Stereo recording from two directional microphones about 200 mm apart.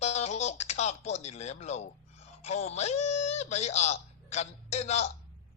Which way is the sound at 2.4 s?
30° left (ahead or behind).